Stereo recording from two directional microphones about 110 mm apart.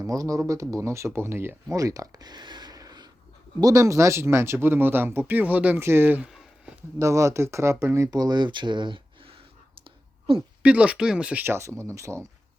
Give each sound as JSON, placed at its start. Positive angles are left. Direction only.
{"t": 0.0, "sound": "speech", "side_deg": -30}
{"t": 7.0, "sound": "speech", "side_deg": -30}
{"t": 9.8, "sound": "clicking", "side_deg": -55}
{"t": 10.6, "sound": "speech", "side_deg": -10}
{"t": 11.5, "sound": "speech", "side_deg": -25}